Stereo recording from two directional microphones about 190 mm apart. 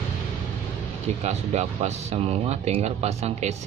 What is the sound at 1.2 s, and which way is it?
Speech, 35° right (ahead or behind).